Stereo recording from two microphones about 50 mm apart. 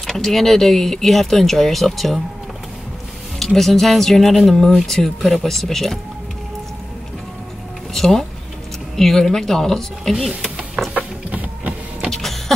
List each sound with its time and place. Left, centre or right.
0.0 s speech: centre
3.3 s speech: centre
7.9 s a sound: centre
8.9 s a woman's voice: centre
10.2 s a sound: centre
10.9 s printer: right
12.1 s power windows: centre